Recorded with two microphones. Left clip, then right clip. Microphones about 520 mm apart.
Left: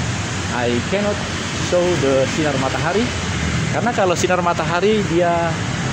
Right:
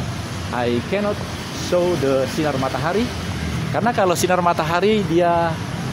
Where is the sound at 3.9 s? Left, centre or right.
Right.